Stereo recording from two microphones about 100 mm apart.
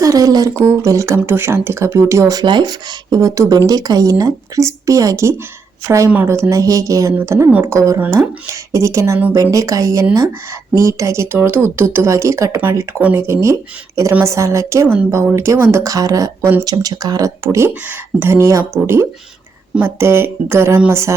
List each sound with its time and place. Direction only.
0.0 s speech: 35° right (ahead or behind)
2.4 s speech: 50° right (ahead or behind); by 13.0 s 30° right (ahead or behind)
13.0 s speech: 15° right (ahead or behind)
13.2 s speech: 30° right (ahead or behind)
19.8 s speech: 25° right (ahead or behind)